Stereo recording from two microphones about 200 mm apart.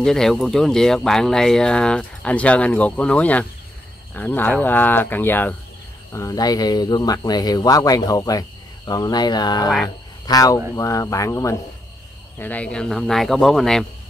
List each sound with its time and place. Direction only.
0.0 s speech: centre (ahead or behind)